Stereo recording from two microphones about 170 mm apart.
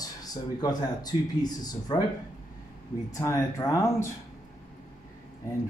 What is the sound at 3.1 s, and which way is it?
Speech, 20° left (ahead or behind).